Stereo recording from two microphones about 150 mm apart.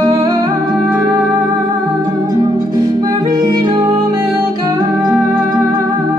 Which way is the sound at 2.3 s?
25° right (ahead or behind).